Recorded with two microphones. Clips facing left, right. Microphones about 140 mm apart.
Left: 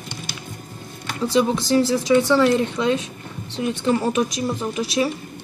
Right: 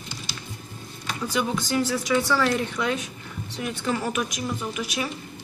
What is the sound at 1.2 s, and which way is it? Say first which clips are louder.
Speech: left 8 dB; 30° left (ahead or behind).